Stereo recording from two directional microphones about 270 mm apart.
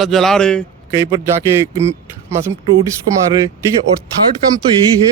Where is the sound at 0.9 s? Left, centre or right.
Centre.